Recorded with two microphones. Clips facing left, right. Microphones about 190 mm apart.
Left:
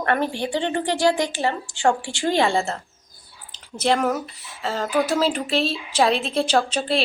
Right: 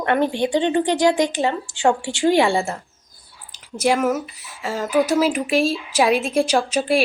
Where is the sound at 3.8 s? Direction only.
5° right (ahead or behind).